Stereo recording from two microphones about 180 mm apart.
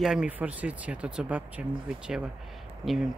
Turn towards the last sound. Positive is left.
turn(degrees=0)  # may be behind; listen again after turning